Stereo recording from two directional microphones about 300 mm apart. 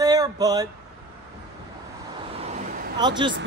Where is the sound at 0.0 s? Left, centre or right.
Centre.